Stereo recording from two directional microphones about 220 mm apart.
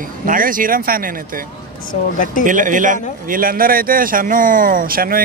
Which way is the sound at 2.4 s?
35° right (ahead or behind).